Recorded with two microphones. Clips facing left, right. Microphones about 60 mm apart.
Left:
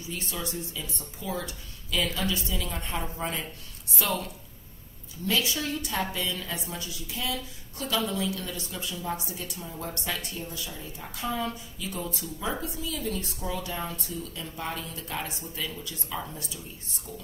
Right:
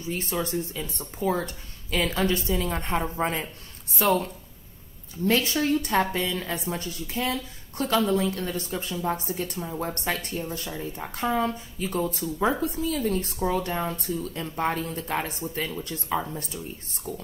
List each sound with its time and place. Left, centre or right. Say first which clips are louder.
0.0 s a woman's voice: right 6 dB; right